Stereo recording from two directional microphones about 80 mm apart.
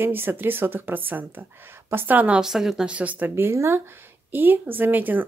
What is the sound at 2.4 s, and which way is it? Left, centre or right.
Speech, centre.